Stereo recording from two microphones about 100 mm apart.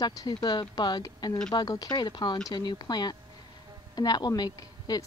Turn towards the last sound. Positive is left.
turn(degrees=40)  # may be behind; listen again after turning